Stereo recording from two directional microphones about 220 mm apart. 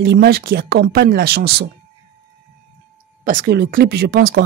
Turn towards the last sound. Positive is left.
turn(degrees=-45)  # may be behind; listen again after turning